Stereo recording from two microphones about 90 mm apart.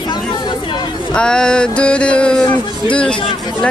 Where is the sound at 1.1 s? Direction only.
10° left (ahead or behind).